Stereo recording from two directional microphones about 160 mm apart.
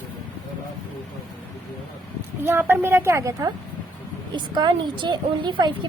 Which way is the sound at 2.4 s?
10° right (ahead or behind).